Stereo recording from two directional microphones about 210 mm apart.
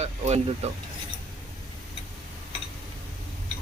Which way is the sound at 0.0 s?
30° right (ahead or behind).